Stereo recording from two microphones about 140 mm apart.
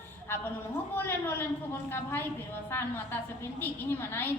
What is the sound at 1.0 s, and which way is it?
A woman's voice, 15° left (ahead or behind).